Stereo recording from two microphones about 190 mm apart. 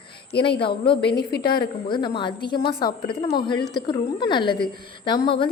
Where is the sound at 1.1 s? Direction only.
55° left (ahead or behind).